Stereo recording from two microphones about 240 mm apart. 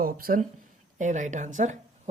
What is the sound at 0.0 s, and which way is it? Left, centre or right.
Speech, right.